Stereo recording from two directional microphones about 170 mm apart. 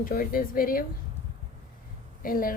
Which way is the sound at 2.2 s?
55° left (ahead or behind).